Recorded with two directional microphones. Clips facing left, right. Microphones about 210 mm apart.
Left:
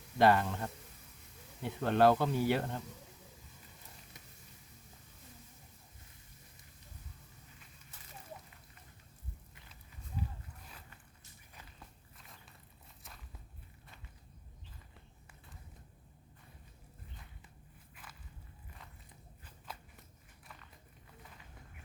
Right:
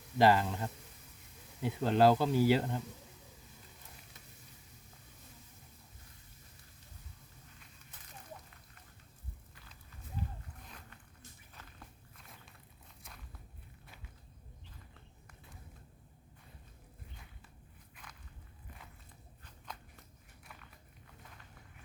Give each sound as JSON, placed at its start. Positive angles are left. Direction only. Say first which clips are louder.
{"t": 0.2, "sound": "speech", "louder": "even", "side_deg": -5}
{"t": 10.7, "sound": "zipper", "louder": "right 2 dB", "side_deg": 5}
{"t": 11.5, "sound": "walk", "louder": "left 1 dB", "side_deg": 0}
{"t": 13.0, "sound": "biting", "louder": "right 1 dB", "side_deg": 0}
{"t": 17.9, "sound": "walk", "louder": "even", "side_deg": 5}
{"t": 19.4, "sound": "biting", "louder": "even", "side_deg": 5}